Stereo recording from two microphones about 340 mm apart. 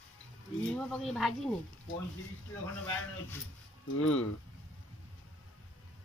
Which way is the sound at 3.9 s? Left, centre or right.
Left.